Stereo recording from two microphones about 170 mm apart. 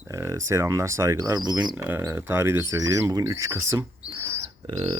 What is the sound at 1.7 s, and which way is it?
Speech, 10° right (ahead or behind).